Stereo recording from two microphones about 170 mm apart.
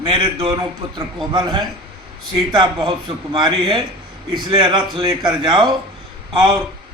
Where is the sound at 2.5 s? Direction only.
25° right (ahead or behind).